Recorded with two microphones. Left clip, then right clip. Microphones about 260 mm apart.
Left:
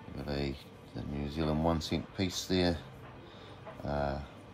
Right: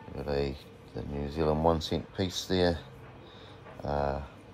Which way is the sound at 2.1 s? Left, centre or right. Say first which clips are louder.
Right 1 dB; centre.